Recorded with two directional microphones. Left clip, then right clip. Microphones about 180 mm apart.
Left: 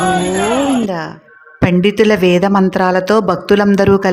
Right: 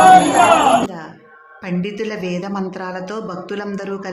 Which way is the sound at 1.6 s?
45° left (ahead or behind).